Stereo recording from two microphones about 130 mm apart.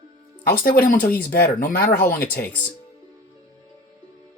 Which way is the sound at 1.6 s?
90° left.